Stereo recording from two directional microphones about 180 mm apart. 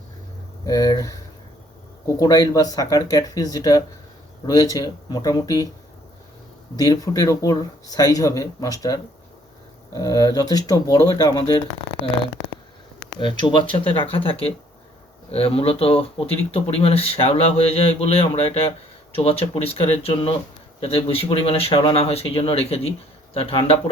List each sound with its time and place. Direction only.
0.6 s speech: 20° left (ahead or behind)
6.7 s speech: 20° left (ahead or behind)
13.1 s speech: 25° left (ahead or behind)